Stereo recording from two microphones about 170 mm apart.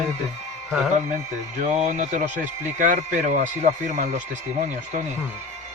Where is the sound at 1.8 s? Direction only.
45° right (ahead or behind).